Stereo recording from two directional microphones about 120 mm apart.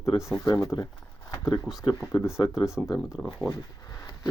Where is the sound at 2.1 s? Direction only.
25° left (ahead or behind).